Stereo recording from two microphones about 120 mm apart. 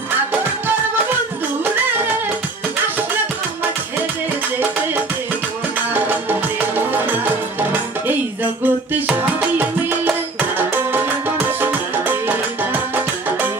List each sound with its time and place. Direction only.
5.9 s music: 15° right (ahead or behind)